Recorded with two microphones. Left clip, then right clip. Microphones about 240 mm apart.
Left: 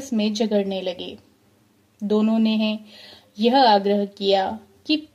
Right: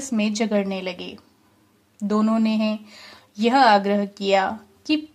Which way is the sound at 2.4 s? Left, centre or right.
Right.